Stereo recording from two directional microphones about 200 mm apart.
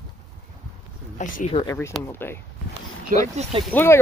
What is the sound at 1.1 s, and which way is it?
Speech, 35° left (ahead or behind).